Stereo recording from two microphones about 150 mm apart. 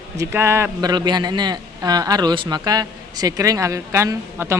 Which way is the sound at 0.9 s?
25° right (ahead or behind).